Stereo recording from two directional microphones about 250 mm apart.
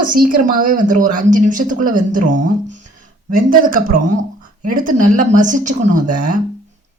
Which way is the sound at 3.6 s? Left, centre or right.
Right.